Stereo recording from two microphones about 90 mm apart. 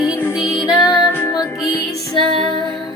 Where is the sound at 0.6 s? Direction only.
50° left (ahead or behind).